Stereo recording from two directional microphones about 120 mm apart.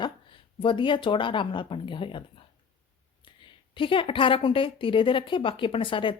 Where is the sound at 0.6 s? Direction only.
45° left (ahead or behind).